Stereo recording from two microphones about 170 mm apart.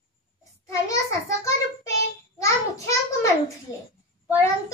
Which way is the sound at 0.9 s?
20° left (ahead or behind).